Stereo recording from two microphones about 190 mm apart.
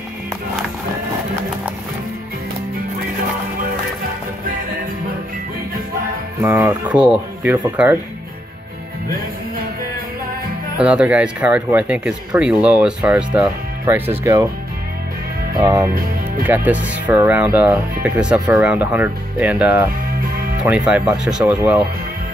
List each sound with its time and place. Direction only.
6.4 s speech: 10° right (ahead or behind)
10.8 s speech: 5° right (ahead or behind)
15.5 s music: 20° right (ahead or behind)
15.9 s speech: 50° right (ahead or behind)
16.4 s speech: 10° right (ahead or behind)